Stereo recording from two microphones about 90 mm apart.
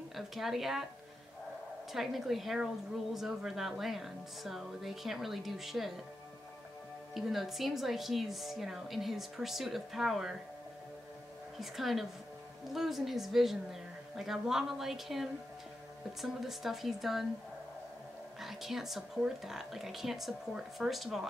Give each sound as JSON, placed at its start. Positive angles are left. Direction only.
{"t": 0.1, "sound": "a woman's voice", "side_deg": 0}
{"t": 1.9, "sound": "a woman's voice", "side_deg": 0}
{"t": 7.2, "sound": "a woman's voice", "side_deg": 0}
{"t": 11.6, "sound": "a woman's voice", "side_deg": 0}
{"t": 18.4, "sound": "a woman's voice", "side_deg": -5}